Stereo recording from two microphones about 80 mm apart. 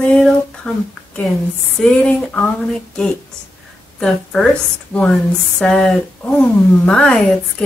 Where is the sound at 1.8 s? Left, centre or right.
Centre.